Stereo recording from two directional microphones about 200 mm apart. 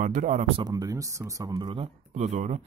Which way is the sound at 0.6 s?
20° right (ahead or behind).